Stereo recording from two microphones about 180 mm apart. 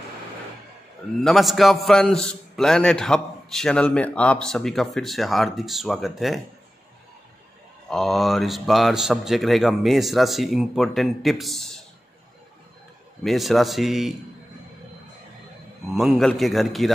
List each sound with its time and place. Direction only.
1.2 s a man's voice: centre (ahead or behind)
7.9 s a man's voice: centre (ahead or behind)
13.2 s a man's voice: centre (ahead or behind)
15.9 s a man's voice: centre (ahead or behind)